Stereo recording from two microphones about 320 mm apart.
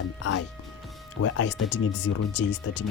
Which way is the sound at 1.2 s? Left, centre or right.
Left.